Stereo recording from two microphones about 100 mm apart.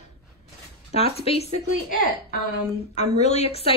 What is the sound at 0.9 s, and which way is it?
Speech, 75° left (ahead or behind).